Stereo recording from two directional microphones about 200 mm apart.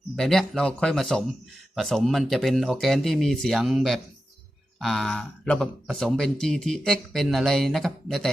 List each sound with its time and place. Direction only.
0.2 s speech: centre (ahead or behind)